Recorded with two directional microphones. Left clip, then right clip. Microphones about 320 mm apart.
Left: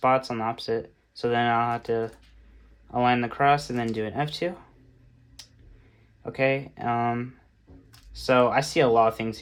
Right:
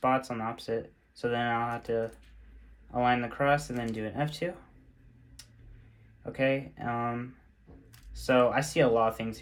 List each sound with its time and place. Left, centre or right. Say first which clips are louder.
0.0 s speech: left 6 dB; centre
6.2 s speech: left 4 dB; centre